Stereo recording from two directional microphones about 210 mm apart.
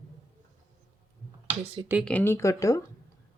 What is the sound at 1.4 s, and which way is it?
Speech, 25° right (ahead or behind).